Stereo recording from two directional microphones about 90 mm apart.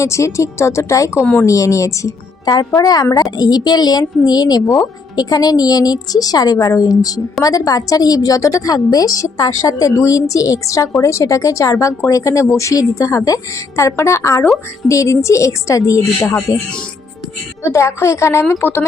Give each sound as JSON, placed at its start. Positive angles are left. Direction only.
{"t": 0.0, "sound": "a woman's voice", "side_deg": 35}
{"t": 17.6, "sound": "a woman's voice", "side_deg": 35}